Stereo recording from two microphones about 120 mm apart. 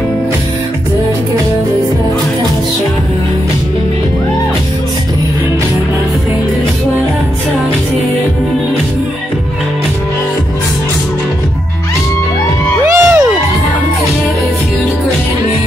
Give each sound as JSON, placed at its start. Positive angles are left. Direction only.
{"t": 12.8, "sound": "music", "side_deg": -25}